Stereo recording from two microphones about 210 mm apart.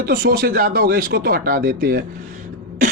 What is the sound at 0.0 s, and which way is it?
Speech, 45° right (ahead or behind).